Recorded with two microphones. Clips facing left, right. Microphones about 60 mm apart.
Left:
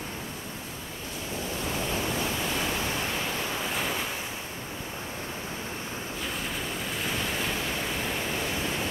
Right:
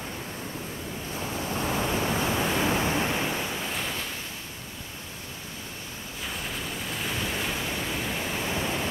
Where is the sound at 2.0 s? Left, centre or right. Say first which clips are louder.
Right 3 dB; right.